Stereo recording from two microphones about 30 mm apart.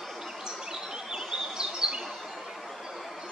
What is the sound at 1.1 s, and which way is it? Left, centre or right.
Bird vocalization, centre.